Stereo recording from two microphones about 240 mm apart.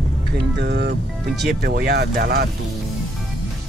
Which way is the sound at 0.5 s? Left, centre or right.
Right.